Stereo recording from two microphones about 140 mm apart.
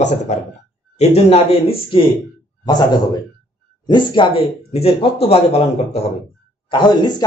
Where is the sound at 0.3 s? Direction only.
55° left (ahead or behind).